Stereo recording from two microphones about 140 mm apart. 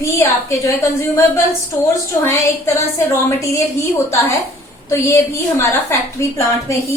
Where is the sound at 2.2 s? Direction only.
20° left (ahead or behind).